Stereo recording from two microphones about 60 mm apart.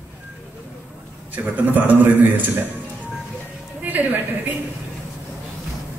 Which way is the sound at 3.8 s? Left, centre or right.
Right.